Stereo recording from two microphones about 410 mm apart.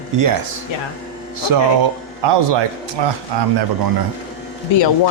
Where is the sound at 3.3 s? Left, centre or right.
Right.